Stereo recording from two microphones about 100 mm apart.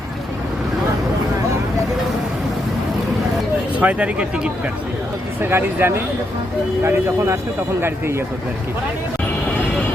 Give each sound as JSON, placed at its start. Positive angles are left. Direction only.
{"t": 3.8, "sound": "speech", "side_deg": -15}
{"t": 5.4, "sound": "speech", "side_deg": -20}